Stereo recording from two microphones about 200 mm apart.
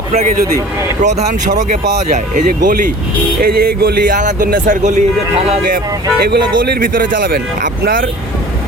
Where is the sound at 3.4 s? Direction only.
50° right (ahead or behind).